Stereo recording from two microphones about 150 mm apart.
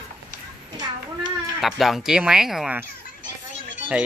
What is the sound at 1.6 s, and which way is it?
Speech, centre (ahead or behind).